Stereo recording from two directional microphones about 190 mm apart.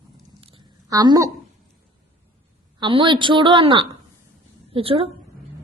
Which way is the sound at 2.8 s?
25° right (ahead or behind).